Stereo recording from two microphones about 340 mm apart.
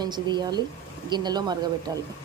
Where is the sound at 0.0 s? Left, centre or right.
Centre.